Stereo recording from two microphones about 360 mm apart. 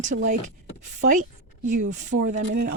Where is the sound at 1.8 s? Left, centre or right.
Centre.